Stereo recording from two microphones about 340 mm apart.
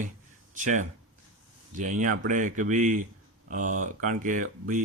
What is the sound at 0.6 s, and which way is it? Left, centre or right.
Speech, right.